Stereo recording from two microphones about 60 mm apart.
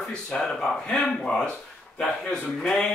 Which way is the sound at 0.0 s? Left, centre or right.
Centre.